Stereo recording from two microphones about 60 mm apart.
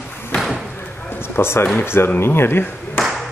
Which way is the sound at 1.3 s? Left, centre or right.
Left.